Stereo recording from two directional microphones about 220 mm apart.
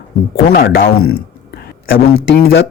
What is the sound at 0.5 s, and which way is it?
Speech, 45° left (ahead or behind).